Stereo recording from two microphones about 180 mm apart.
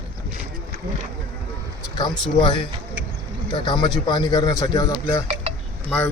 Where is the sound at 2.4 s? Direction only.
25° left (ahead or behind).